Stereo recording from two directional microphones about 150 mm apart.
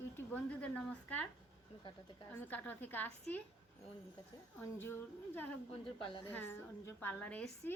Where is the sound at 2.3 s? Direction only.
10° left (ahead or behind).